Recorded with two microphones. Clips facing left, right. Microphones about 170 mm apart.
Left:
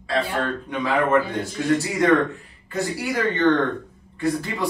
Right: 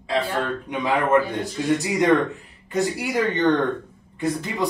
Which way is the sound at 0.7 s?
20° right (ahead or behind).